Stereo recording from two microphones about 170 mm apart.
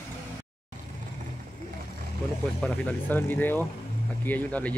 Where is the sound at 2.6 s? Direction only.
10° left (ahead or behind).